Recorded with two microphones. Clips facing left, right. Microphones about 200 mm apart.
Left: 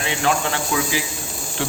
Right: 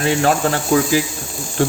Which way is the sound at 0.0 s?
45° right (ahead or behind).